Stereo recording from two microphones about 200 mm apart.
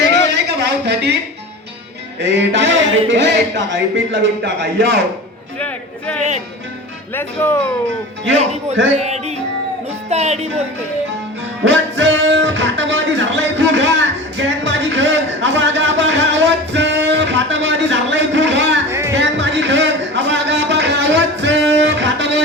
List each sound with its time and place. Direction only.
0.0 s a sound: 55° right (ahead or behind)
2.2 s speech: 60° right (ahead or behind)
5.5 s a man's voice: 5° left (ahead or behind)
8.9 s music: 35° right (ahead or behind)
11.6 s music: 65° right (ahead or behind)
18.9 s music: 15° right (ahead or behind)
19.1 s a sound: 65° right (ahead or behind)